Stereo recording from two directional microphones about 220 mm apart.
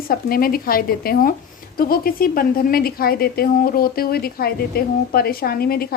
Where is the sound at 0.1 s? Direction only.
40° left (ahead or behind).